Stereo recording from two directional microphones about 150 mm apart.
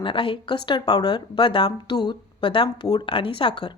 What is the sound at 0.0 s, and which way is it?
Speech, 35° left (ahead or behind).